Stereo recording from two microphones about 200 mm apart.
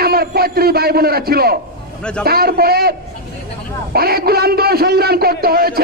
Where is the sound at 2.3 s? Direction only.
50° right (ahead or behind).